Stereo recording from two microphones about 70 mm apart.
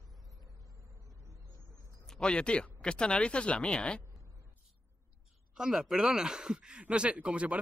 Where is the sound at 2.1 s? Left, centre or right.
Centre.